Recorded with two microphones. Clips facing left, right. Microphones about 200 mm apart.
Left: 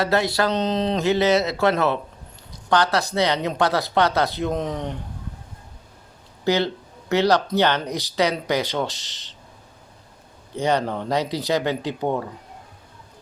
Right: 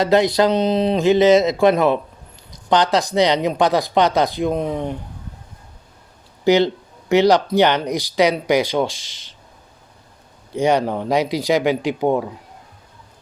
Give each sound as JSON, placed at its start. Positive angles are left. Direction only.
{"t": 0.0, "sound": "speech", "side_deg": -20}
{"t": 6.4, "sound": "speech", "side_deg": -15}
{"t": 10.5, "sound": "speech", "side_deg": -15}